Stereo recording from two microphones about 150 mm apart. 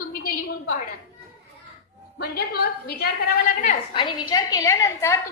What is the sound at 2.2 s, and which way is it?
A woman's voice, 90° left.